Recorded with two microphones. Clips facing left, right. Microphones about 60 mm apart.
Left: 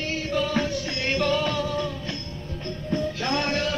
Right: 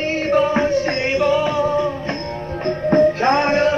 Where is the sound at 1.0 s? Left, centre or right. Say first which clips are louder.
Right 3 dB; centre.